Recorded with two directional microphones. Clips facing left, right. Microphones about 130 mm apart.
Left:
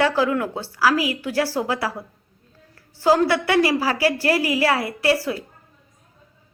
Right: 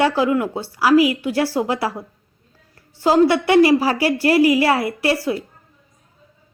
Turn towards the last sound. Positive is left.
turn(degrees=-20)  # may be behind; listen again after turning